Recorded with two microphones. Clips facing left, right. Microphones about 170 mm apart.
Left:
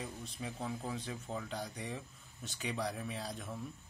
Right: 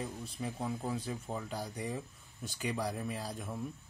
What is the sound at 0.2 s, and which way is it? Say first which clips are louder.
Speech: right 3 dB; 10° right (ahead or behind).